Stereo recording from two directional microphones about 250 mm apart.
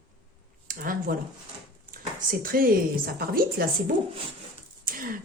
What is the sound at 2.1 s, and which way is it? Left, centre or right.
Speech, right.